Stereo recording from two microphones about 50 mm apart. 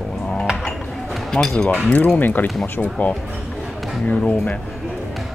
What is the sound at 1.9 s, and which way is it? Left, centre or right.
Speech, left.